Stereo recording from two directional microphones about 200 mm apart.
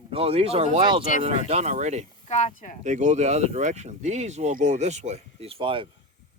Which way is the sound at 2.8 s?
35° right (ahead or behind).